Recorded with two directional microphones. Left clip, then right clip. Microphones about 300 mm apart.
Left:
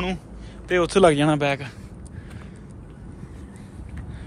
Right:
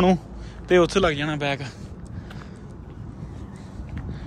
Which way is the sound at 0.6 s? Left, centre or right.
Centre.